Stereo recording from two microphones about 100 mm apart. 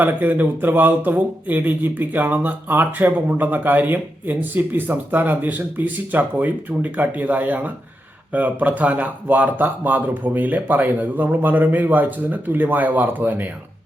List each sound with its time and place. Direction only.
0.0 s speech: 20° right (ahead or behind)